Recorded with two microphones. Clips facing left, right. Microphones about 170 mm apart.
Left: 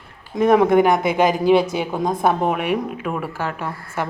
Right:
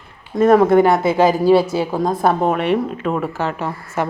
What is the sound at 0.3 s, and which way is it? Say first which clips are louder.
Speech: right 3 dB; centre (ahead or behind).